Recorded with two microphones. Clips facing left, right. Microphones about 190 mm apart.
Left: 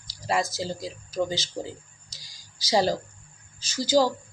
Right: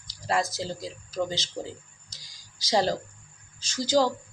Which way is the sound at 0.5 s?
5° left (ahead or behind).